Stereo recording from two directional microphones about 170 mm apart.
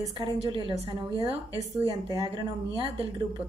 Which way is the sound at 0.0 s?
25° right (ahead or behind).